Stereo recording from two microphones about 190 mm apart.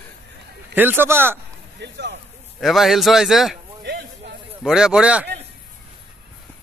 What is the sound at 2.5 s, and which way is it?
Speech, centre (ahead or behind).